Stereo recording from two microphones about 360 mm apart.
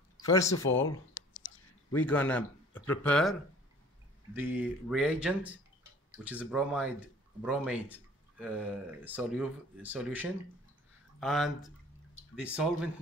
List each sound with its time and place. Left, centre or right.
0.3 s speech: centre
0.6 s speech: left
1.9 s speech: centre
4.4 s speech: centre